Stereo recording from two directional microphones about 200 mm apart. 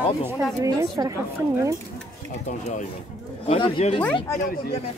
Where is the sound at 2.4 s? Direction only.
35° left (ahead or behind).